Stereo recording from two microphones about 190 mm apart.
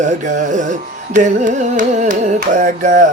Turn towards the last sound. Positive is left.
turn(degrees=-45)  # may be behind; listen again after turning